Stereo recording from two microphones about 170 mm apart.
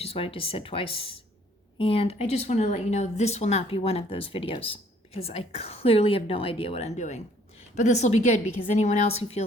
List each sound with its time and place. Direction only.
0.0 s speech: 35° left (ahead or behind)